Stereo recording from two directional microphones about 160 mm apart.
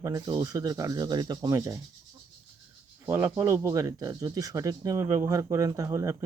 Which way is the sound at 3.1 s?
15° right (ahead or behind).